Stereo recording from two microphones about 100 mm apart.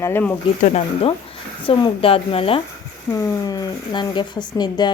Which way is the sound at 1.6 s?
60° left (ahead or behind).